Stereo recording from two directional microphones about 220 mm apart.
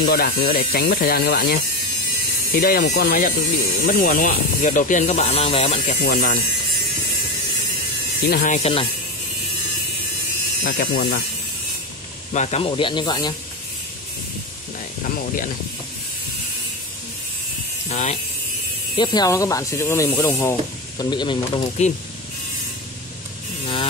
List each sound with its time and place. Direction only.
0.0 s speech: 45° left (ahead or behind)
2.6 s speech: 40° left (ahead or behind)
6.0 s speech: 40° left (ahead or behind)
8.3 s speech: 35° left (ahead or behind)
10.6 s speech: 45° left (ahead or behind)
12.3 s speech: 30° left (ahead or behind)
17.8 s electric shaver: 30° left (ahead or behind)
18.9 s speech: 15° left (ahead or behind)